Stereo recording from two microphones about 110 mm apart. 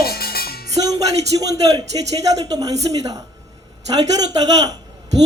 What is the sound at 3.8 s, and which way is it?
Speech, 35° right (ahead or behind).